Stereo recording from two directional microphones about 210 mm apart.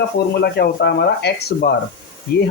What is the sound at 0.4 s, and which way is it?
Speech, 50° left (ahead or behind).